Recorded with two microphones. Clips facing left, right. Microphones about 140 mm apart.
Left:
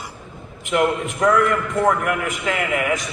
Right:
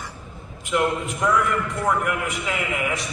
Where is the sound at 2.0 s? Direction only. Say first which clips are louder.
Left 3 dB; 50° left (ahead or behind).